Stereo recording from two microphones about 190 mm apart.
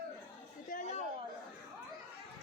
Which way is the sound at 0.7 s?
40° left (ahead or behind).